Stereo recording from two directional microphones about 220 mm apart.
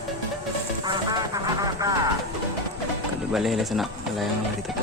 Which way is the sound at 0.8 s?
20° right (ahead or behind).